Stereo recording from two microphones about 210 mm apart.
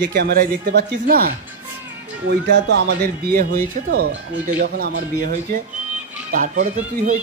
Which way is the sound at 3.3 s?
45° right (ahead or behind).